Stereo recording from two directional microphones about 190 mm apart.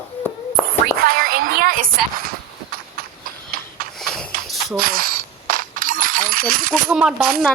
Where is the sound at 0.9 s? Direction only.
50° right (ahead or behind).